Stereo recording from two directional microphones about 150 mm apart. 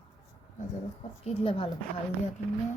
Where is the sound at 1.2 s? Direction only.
35° left (ahead or behind).